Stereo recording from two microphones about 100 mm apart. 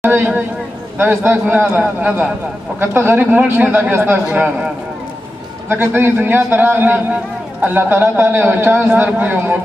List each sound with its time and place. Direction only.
0.0 s a man's voice: 20° right (ahead or behind)
5.7 s a man's voice: 25° right (ahead or behind)